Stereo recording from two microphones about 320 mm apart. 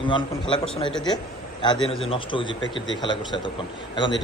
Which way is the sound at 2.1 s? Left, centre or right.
Centre.